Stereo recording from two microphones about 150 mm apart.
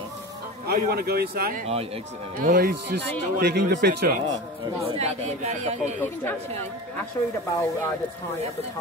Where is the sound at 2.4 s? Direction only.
75° right (ahead or behind).